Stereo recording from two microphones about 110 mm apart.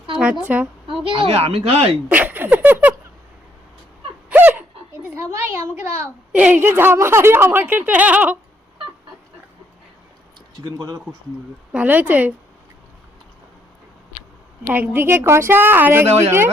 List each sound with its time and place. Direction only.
0.2 s a woman's voice: 10° right (ahead or behind)
1.1 s speech: 55° right (ahead or behind)
2.0 s a sound: 15° right (ahead or behind)
4.3 s a sound: 15° right (ahead or behind)
5.1 s a woman's voice: 25° right (ahead or behind)
10.6 s speech: 35° right (ahead or behind)
11.7 s speech: 10° right (ahead or behind)
14.7 s a woman's voice: 20° right (ahead or behind)
16.0 s speech: 75° right (ahead or behind)